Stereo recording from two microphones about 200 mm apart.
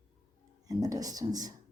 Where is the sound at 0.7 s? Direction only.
20° right (ahead or behind).